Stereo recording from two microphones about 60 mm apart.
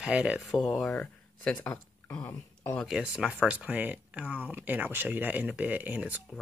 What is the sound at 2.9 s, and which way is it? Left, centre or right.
Speech, centre.